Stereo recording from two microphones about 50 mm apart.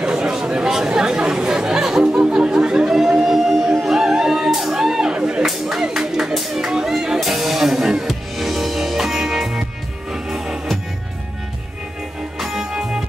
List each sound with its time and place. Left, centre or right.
0.0 s chatter: centre
3.3 s music: centre
5.1 s a sound: right
5.4 s music: centre
12.4 s music: centre